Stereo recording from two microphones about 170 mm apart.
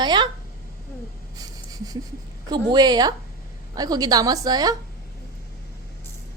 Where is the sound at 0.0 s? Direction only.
25° right (ahead or behind).